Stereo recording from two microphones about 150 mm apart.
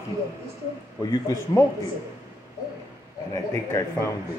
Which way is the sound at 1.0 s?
25° left (ahead or behind).